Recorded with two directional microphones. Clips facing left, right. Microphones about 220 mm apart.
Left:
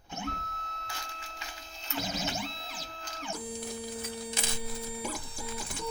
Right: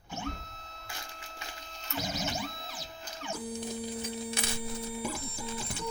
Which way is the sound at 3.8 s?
20° right (ahead or behind).